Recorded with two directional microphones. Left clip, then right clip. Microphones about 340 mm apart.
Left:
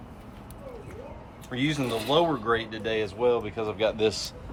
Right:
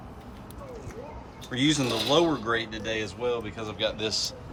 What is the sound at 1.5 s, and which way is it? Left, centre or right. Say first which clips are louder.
Speech: right 3 dB; centre.